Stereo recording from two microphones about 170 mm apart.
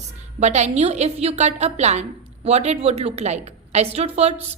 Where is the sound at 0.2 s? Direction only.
40° right (ahead or behind).